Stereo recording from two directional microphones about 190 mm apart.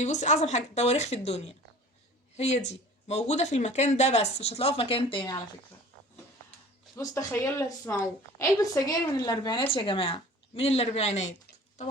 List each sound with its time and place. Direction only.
0.0 s speech: 40° left (ahead or behind)
6.9 s a woman's voice: 15° left (ahead or behind); by 11.3 s 35° left (ahead or behind)